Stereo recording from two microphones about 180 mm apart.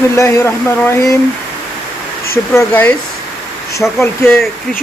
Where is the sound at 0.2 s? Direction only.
15° left (ahead or behind).